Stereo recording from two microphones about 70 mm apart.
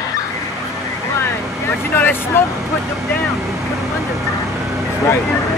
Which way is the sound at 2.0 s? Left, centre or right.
Left.